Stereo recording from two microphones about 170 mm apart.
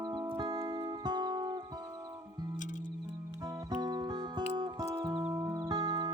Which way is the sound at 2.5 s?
50° left (ahead or behind).